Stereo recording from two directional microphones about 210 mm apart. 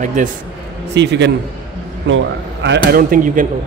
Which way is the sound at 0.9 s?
55° right (ahead or behind).